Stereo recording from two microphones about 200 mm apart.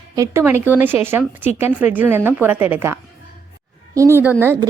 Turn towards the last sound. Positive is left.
turn(degrees=-10)  # may be behind; listen again after turning